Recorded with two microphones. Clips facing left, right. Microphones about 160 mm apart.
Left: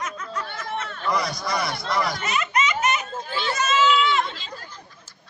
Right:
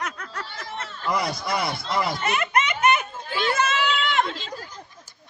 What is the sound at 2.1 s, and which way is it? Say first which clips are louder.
Baby laughter: right 1 dB; 55° right (ahead or behind).